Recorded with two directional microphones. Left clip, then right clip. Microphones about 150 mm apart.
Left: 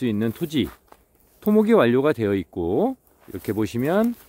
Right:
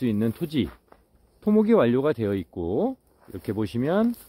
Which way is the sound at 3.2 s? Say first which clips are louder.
Left 4 dB; 35° left (ahead or behind).